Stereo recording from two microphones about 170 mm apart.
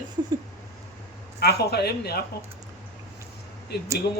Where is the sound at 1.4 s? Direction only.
70° left (ahead or behind).